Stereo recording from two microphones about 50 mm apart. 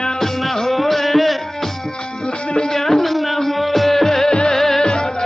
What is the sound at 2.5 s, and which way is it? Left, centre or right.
Music, centre.